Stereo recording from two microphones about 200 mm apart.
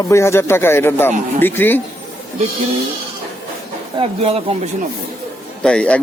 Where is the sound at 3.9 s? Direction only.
30° right (ahead or behind).